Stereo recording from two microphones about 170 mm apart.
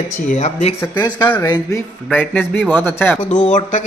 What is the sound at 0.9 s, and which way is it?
Speech, 25° left (ahead or behind).